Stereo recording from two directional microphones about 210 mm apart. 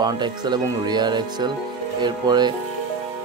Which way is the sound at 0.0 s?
20° right (ahead or behind).